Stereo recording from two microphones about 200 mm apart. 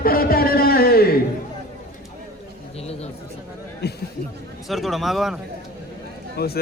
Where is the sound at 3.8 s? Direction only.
55° left (ahead or behind).